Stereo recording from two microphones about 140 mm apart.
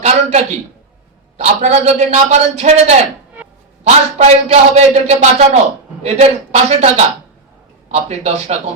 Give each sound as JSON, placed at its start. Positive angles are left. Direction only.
{"t": 0.0, "sound": "a man's voice", "side_deg": -50}